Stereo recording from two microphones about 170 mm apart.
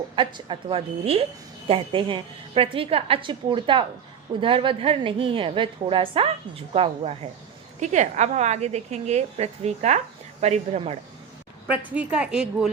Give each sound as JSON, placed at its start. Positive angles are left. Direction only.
{"t": 0.2, "sound": "a woman's voice", "side_deg": -30}
{"t": 11.7, "sound": "a woman's voice", "side_deg": -10}